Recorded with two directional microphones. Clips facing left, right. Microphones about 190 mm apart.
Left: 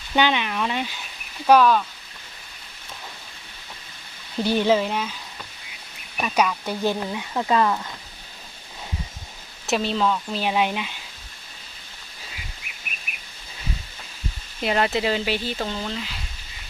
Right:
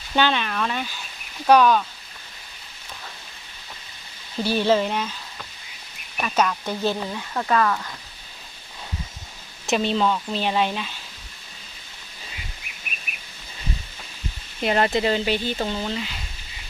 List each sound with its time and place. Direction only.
0.2 s speech: 15° left (ahead or behind)
1.5 s speech: centre (ahead or behind)
4.4 s speech: 15° left (ahead or behind)
4.8 s sizzle: 5° left (ahead or behind)
6.2 s speech: 10° left (ahead or behind)
9.6 s speech: centre (ahead or behind)
14.6 s speech: centre (ahead or behind)